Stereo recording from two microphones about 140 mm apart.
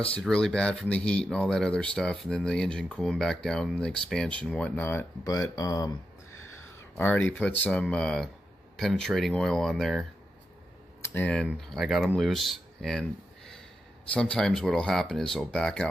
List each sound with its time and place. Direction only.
0.1 s speech: 5° left (ahead or behind)
5.2 s speech: 25° left (ahead or behind)
7.0 s speech: 15° left (ahead or behind)
11.1 s speech: 10° left (ahead or behind)
14.1 s speech: 10° left (ahead or behind)